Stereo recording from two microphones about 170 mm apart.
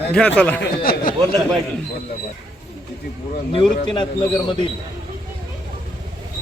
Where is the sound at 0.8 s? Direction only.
60° left (ahead or behind).